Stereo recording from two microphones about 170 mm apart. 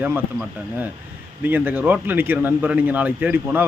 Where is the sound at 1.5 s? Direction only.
10° right (ahead or behind).